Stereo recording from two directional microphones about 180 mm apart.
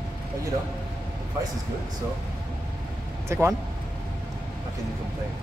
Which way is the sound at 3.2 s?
15° right (ahead or behind).